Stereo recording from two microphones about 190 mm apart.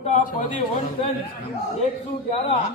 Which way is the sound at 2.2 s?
30° left (ahead or behind).